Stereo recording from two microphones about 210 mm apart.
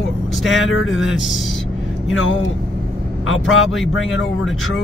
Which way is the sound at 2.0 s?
65° left (ahead or behind).